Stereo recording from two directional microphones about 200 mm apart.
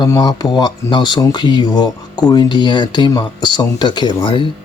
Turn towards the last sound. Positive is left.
turn(degrees=25)  # may be behind; listen again after turning